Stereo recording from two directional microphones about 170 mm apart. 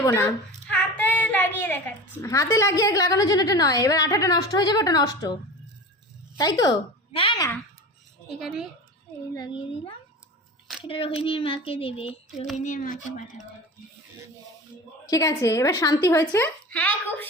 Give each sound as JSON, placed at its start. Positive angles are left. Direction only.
{"t": 0.0, "sound": "a woman's voice", "side_deg": 15}
{"t": 0.7, "sound": "child singing", "side_deg": 10}
{"t": 2.2, "sound": "a woman's voice", "side_deg": 20}
{"t": 6.4, "sound": "a woman's voice", "side_deg": 25}
{"t": 9.3, "sound": "a woman's voice", "side_deg": 25}
{"t": 12.5, "sound": "speech", "side_deg": 50}
{"t": 15.0, "sound": "a woman's voice", "side_deg": 20}